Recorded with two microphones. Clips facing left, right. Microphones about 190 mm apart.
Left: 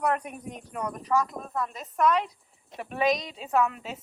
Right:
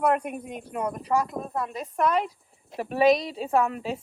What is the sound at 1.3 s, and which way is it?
Speech, 25° right (ahead or behind).